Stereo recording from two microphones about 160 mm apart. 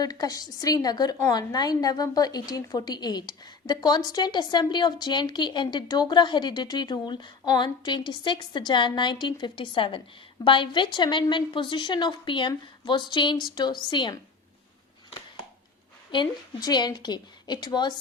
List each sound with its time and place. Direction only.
0.0 s a woman's voice: 25° left (ahead or behind)
16.1 s a woman's voice: 25° left (ahead or behind)